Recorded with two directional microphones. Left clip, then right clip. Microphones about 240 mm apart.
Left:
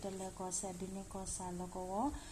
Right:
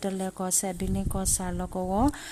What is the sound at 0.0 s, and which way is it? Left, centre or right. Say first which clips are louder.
Speech: right 12 dB; right.